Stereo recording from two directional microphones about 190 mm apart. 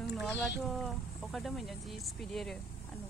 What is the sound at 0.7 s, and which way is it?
Speech, centre (ahead or behind).